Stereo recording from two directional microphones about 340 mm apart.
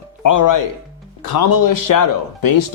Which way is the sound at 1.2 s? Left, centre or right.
Left.